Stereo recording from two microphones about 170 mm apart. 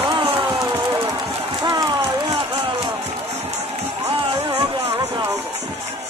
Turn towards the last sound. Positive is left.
turn(degrees=-20)  # may be behind; listen again after turning